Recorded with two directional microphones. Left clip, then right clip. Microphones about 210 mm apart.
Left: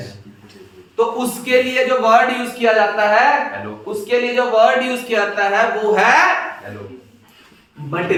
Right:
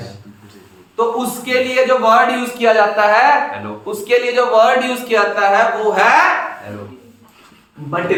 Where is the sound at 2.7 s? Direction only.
30° right (ahead or behind).